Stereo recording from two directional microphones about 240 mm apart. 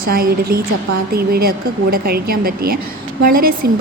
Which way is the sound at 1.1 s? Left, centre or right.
Right.